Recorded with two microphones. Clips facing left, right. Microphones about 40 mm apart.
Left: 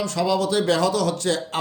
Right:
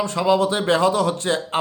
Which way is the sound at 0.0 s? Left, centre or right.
Right.